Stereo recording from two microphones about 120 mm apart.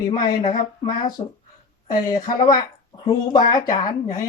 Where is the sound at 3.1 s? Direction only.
35° left (ahead or behind).